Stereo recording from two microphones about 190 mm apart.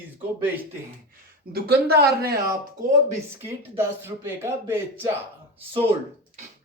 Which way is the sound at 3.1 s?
10° right (ahead or behind).